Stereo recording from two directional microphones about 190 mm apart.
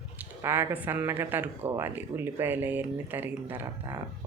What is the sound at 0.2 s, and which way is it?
Speech, 10° right (ahead or behind).